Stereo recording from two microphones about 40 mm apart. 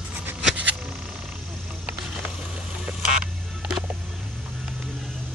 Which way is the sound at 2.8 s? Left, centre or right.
Centre.